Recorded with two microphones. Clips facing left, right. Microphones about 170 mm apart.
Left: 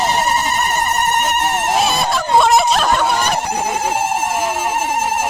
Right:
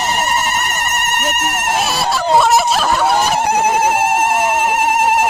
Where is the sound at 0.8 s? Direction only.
75° right (ahead or behind).